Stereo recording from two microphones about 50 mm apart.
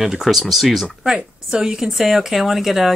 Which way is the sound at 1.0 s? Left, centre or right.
Centre.